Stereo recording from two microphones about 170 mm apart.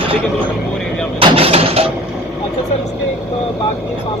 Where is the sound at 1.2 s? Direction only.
30° right (ahead or behind).